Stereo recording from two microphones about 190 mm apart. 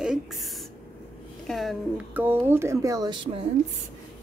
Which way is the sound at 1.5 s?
Centre (ahead or behind).